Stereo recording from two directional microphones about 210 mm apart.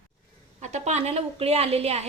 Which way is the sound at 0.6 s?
35° right (ahead or behind).